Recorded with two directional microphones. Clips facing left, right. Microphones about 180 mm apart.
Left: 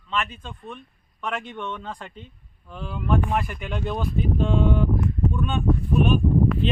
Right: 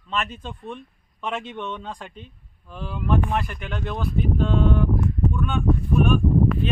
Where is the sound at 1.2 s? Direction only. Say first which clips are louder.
Right 1 dB; 25° right (ahead or behind).